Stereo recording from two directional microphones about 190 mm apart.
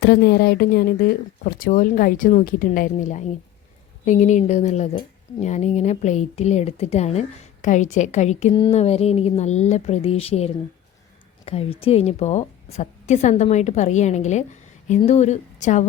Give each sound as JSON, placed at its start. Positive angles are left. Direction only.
{"t": 0.0, "sound": "a woman's voice", "side_deg": 60}